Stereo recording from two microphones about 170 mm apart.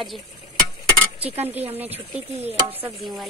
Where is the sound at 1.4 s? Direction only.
35° right (ahead or behind).